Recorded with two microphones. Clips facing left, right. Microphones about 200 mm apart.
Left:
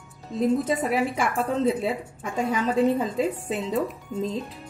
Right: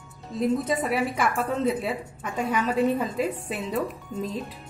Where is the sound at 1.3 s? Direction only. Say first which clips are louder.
Left 2 dB; 30° left (ahead or behind).